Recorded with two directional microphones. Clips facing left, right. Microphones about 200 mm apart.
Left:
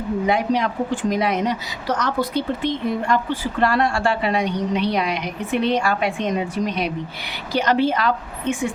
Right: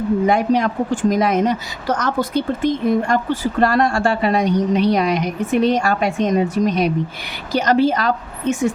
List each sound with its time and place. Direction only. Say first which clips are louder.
0.3 s a woman's voice: right 1 dB; 45° right (ahead or behind)